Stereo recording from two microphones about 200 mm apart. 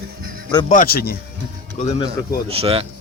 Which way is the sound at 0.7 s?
45° left (ahead or behind).